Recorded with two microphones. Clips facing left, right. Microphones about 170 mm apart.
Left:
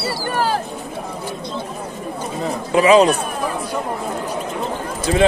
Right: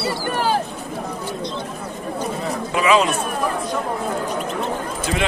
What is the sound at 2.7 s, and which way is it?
Speech, 35° left (ahead or behind).